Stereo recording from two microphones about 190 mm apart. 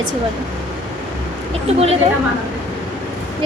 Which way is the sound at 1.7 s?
35° right (ahead or behind).